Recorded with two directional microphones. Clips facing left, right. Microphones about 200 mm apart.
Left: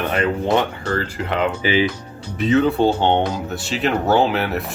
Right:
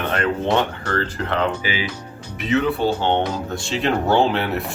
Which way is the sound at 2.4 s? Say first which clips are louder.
Left 4 dB; 35° left (ahead or behind).